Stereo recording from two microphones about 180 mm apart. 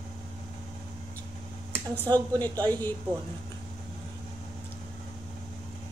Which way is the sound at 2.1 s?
10° left (ahead or behind).